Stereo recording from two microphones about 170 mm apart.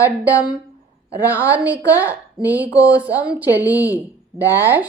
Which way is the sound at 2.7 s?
20° left (ahead or behind).